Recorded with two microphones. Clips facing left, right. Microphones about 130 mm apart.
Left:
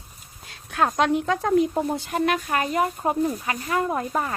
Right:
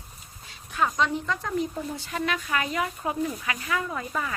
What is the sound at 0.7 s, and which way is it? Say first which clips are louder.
Speech: left 4 dB; 70° left (ahead or behind).